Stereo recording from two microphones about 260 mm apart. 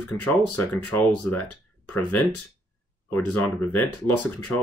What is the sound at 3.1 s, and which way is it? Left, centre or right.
Speech, centre.